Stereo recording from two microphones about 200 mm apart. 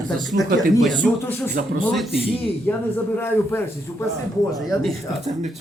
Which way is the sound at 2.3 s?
30° left (ahead or behind).